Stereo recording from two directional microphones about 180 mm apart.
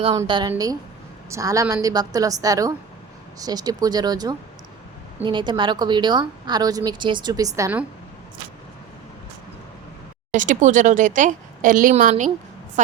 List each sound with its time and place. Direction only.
0.1 s speech: 25° right (ahead or behind)
10.3 s a woman's voice: 45° right (ahead or behind)